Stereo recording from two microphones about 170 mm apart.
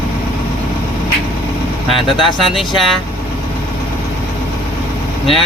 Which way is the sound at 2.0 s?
30° left (ahead or behind).